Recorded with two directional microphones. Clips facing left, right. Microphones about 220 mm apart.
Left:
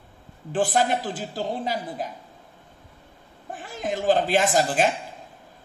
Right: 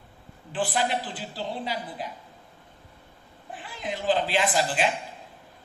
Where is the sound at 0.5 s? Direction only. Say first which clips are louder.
Left 5 dB; 45° left (ahead or behind).